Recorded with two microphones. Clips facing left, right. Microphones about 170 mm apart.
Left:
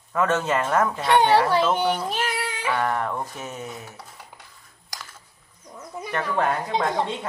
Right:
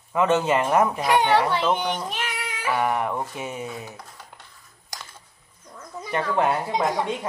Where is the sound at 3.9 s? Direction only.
10° left (ahead or behind).